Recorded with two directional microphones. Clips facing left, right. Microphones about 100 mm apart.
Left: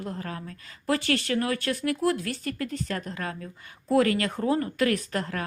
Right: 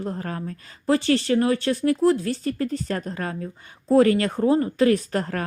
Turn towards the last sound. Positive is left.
turn(degrees=-40)  # may be behind; listen again after turning